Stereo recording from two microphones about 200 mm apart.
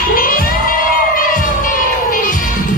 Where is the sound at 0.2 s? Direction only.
45° left (ahead or behind).